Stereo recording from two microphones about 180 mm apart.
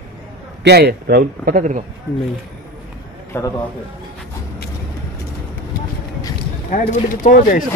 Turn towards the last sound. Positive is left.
turn(degrees=45)  # may be behind; listen again after turning